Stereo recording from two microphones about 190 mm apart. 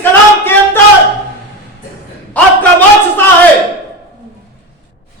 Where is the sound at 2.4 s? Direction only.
10° left (ahead or behind).